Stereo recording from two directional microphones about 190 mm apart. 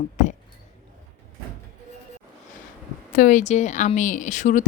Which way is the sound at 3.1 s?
40° left (ahead or behind).